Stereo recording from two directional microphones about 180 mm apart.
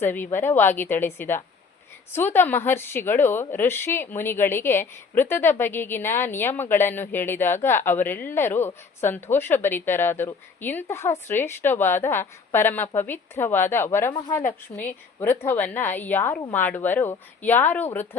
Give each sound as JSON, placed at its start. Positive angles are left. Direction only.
{"t": 0.0, "sound": "a woman's voice", "side_deg": 10}
{"t": 14.7, "sound": "a woman's voice", "side_deg": 30}
{"t": 15.2, "sound": "a woman's voice", "side_deg": 10}